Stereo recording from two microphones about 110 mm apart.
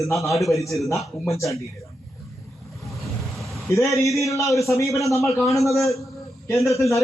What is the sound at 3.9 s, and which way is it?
A man's voice, 30° left (ahead or behind).